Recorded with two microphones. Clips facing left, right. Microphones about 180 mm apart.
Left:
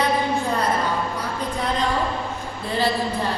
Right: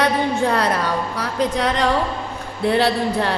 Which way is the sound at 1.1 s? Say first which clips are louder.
Right 6 dB; 75° right (ahead or behind).